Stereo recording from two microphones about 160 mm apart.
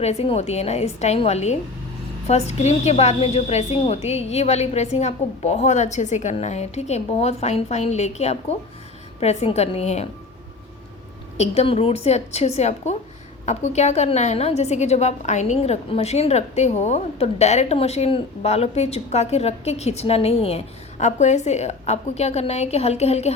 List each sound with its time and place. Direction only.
0.0 s a woman's voice: 40° left (ahead or behind)
11.3 s a woman's voice: 40° left (ahead or behind)